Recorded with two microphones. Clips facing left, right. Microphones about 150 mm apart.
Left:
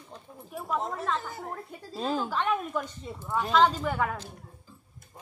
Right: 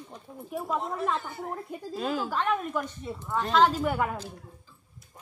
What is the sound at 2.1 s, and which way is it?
A woman's voice, 5° right (ahead or behind).